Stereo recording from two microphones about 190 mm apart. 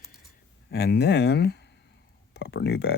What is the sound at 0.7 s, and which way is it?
Speech, 60° left (ahead or behind).